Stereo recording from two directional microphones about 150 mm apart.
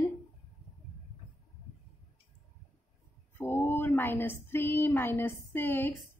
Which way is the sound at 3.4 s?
15° left (ahead or behind).